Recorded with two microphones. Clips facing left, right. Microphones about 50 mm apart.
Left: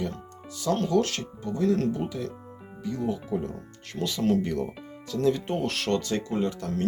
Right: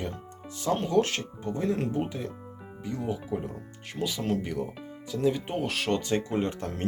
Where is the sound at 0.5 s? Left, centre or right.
Right.